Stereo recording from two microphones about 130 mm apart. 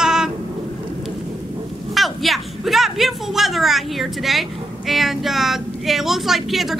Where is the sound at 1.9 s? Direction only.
Centre (ahead or behind).